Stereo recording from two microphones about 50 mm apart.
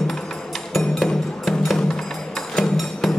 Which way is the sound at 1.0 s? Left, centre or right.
Centre.